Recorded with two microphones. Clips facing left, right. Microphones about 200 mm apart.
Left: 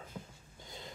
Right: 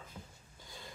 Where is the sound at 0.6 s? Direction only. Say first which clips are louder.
Left 3 dB; 20° left (ahead or behind).